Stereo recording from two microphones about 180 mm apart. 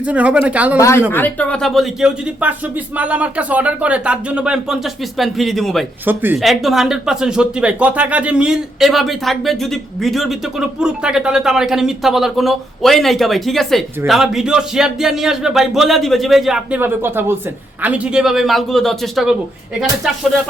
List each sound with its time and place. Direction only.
0.0 s speech: 5° right (ahead or behind)
0.8 s speech: 15° left (ahead or behind)
6.1 s speech: 10° right (ahead or behind)
6.4 s speech: centre (ahead or behind)